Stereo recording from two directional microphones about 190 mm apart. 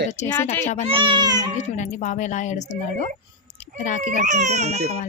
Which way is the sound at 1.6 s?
40° left (ahead or behind).